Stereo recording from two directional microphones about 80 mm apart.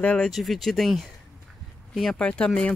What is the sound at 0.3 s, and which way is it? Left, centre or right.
Speech, centre.